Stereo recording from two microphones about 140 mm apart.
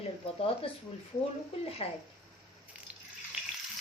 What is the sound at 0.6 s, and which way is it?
Speech, 40° left (ahead or behind).